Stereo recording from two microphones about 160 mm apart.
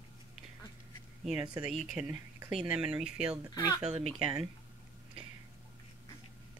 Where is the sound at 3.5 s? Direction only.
20° left (ahead or behind).